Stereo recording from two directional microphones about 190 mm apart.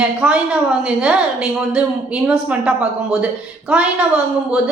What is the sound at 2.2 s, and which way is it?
A woman's voice, 5° right (ahead or behind).